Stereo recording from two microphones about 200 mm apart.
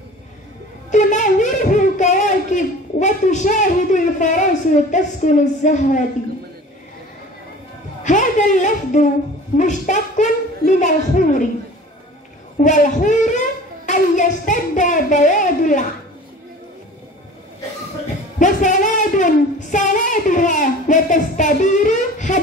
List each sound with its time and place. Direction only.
0.9 s a sound: 40° left (ahead or behind)
4.9 s speech: 40° left (ahead or behind)
8.0 s a woman's voice: 40° left (ahead or behind)
12.5 s a child's voice: 40° left (ahead or behind)
18.4 s speech: 40° left (ahead or behind)